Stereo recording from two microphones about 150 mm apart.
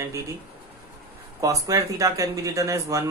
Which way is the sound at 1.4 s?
20° right (ahead or behind).